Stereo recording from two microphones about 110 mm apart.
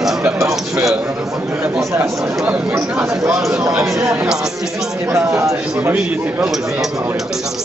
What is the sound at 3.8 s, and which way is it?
Speech, 25° right (ahead or behind).